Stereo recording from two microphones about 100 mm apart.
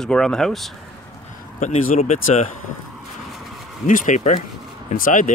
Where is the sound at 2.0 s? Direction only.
90° left.